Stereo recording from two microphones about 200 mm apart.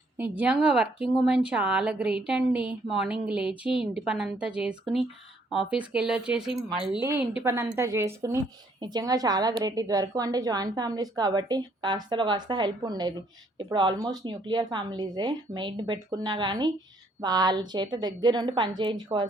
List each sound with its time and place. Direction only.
0.2 s a woman's voice: 5° right (ahead or behind); by 19.3 s 20° right (ahead or behind)